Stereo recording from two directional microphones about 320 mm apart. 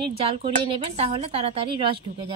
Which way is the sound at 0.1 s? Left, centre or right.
Centre.